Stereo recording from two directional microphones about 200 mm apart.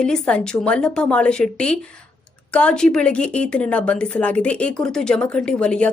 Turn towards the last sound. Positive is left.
turn(degrees=5)  # may be behind; listen again after turning